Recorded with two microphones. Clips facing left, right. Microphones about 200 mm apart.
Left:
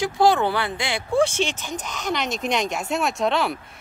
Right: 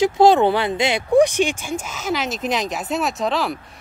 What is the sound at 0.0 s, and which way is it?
Speech, 20° right (ahead or behind).